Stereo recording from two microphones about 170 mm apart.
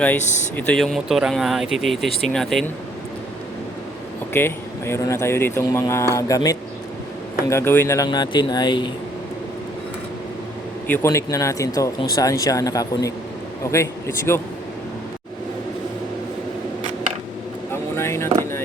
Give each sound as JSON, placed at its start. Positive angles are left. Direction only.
{"t": 0.2, "sound": "speech", "side_deg": 45}
{"t": 0.5, "sound": "speech", "side_deg": 5}
{"t": 4.3, "sound": "speech", "side_deg": 15}
{"t": 10.8, "sound": "speech", "side_deg": 15}
{"t": 14.3, "sound": "speech", "side_deg": 15}
{"t": 17.9, "sound": "vehicle", "side_deg": 15}